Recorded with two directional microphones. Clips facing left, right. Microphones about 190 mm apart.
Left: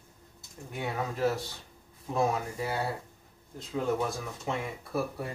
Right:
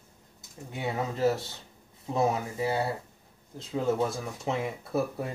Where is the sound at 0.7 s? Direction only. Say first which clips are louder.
Right 2 dB; 25° right (ahead or behind).